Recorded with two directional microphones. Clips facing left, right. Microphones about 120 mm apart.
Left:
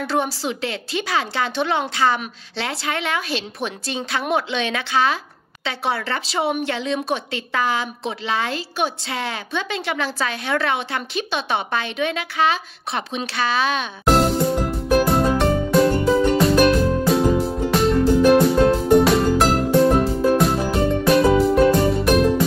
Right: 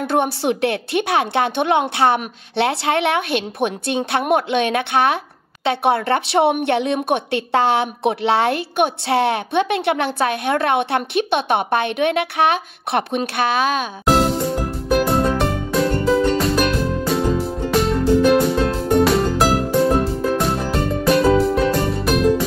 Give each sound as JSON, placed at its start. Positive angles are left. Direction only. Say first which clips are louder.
{"t": 0.0, "sound": "a woman's voice", "louder": "right 4 dB", "side_deg": -55}
{"t": 13.2, "sound": "speech", "louder": "right 3 dB", "side_deg": -50}
{"t": 13.7, "sound": "music", "louder": "right 1 dB", "side_deg": 0}